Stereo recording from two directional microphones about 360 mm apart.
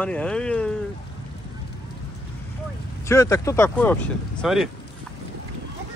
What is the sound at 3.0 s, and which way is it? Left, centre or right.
Speech, centre.